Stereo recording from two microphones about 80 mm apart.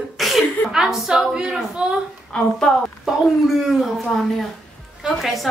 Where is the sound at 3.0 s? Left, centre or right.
Centre.